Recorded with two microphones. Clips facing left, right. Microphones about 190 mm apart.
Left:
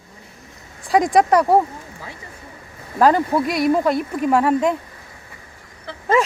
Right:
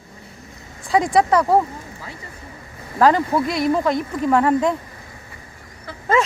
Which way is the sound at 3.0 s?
10° left (ahead or behind).